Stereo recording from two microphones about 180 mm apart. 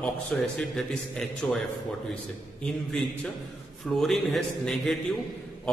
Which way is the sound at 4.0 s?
Centre (ahead or behind).